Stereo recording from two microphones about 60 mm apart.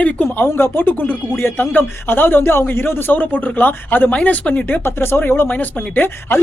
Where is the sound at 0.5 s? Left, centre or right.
Left.